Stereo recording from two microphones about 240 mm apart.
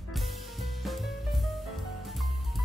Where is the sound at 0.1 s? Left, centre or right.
Centre.